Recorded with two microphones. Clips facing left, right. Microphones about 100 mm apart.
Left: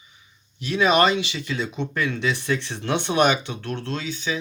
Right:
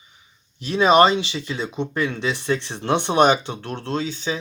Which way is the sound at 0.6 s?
25° right (ahead or behind).